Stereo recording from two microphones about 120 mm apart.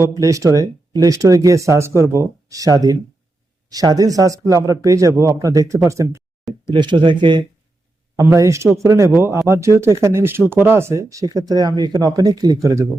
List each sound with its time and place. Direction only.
0.0 s speech: 25° right (ahead or behind)
6.7 s speech: 40° right (ahead or behind)
8.1 s speech: 25° right (ahead or behind)